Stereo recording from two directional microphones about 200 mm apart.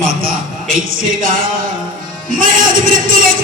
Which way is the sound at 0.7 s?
45° right (ahead or behind).